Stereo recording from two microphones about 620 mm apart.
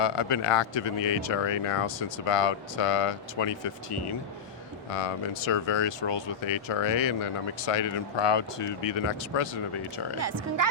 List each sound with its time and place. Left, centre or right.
0.0 s speech: left
4.9 s speech: left
6.4 s speech: left
8.8 s speech: left
10.2 s speech: right